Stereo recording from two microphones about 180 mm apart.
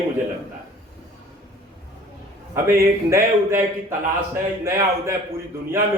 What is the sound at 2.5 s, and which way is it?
A man's voice, 15° right (ahead or behind).